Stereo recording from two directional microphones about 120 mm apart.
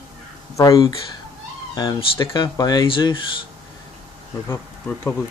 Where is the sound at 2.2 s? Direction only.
40° left (ahead or behind).